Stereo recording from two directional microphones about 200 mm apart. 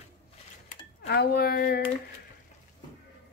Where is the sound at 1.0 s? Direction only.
50° left (ahead or behind).